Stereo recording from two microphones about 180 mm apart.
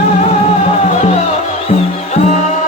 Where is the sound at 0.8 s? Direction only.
40° left (ahead or behind).